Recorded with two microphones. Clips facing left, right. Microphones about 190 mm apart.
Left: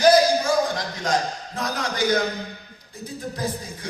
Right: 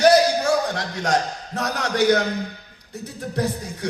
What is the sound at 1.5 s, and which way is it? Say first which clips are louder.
Speech: right 5 dB; 70° right (ahead or behind).